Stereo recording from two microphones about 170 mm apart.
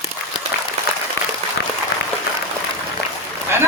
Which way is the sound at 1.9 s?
65° left (ahead or behind).